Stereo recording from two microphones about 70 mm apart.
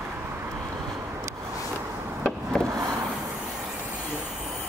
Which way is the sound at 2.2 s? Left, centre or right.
Centre.